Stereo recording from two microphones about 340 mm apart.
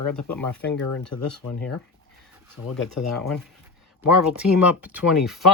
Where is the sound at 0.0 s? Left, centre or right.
Left.